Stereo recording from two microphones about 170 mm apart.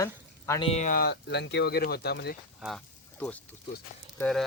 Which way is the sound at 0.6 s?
40° left (ahead or behind).